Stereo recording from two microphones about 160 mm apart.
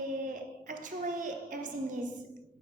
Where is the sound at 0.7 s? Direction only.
55° right (ahead or behind).